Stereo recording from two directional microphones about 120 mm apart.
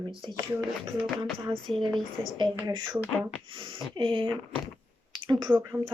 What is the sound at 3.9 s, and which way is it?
Speech, 45° right (ahead or behind).